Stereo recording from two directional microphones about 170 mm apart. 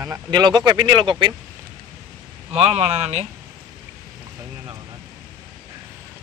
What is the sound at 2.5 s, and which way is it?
Speech, 40° right (ahead or behind).